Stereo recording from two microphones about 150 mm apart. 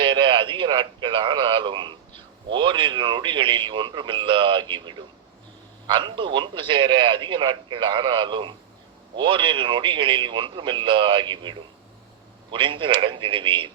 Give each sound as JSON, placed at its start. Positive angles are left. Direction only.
{"t": 0.0, "sound": "a man's voice", "side_deg": -35}